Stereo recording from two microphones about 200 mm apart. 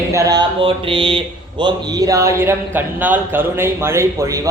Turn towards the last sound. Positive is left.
turn(degrees=-15)  # may be behind; listen again after turning